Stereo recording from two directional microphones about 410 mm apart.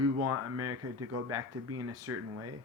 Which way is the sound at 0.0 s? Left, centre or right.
Right.